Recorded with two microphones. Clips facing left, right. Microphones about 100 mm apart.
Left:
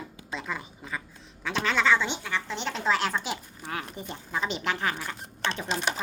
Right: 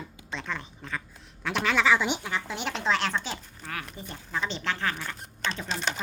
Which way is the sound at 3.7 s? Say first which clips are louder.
Left 3 dB; 25° left (ahead or behind).